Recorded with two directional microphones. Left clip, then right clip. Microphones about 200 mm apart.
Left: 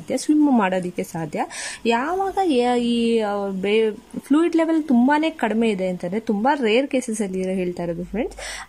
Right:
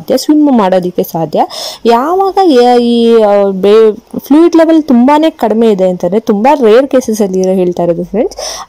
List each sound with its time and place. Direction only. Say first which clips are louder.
0.6 s speech: right 13 dB; 25° right (ahead or behind)
2.9 s speech: right 14 dB; centre (ahead or behind)
3.2 s a woman's voice: right 16 dB; 30° right (ahead or behind)